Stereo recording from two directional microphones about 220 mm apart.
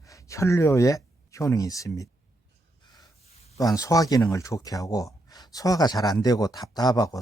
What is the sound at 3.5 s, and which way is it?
Speech, 15° left (ahead or behind).